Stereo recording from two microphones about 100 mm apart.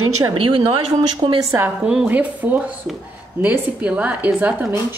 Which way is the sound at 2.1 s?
15° right (ahead or behind).